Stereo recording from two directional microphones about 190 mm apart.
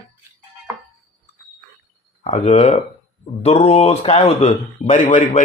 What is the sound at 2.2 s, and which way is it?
Speech, 35° left (ahead or behind).